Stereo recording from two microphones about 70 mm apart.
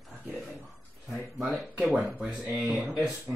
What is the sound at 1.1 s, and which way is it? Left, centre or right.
Speech, centre.